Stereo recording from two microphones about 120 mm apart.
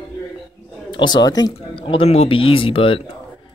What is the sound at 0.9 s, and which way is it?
Speech, 40° left (ahead or behind).